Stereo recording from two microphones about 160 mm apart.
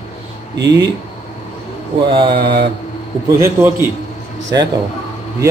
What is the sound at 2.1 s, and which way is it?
Mantra, 30° right (ahead or behind).